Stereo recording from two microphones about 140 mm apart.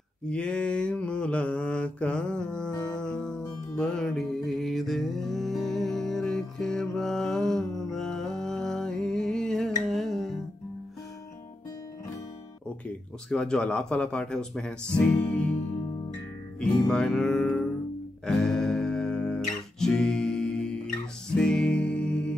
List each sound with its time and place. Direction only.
0.3 s mantra: 10° left (ahead or behind)
13.3 s speech: 5° left (ahead or behind)
16.5 s music: 5° left (ahead or behind)